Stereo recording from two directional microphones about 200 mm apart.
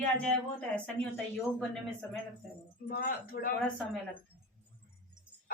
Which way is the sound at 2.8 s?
45° left (ahead or behind).